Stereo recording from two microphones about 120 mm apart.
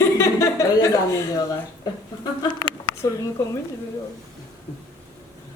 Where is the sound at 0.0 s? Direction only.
25° left (ahead or behind).